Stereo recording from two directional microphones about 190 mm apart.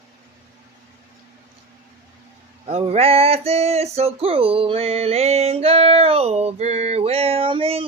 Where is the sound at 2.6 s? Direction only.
35° right (ahead or behind).